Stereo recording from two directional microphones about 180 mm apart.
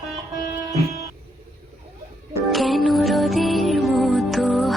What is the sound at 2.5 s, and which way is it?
Music, centre (ahead or behind).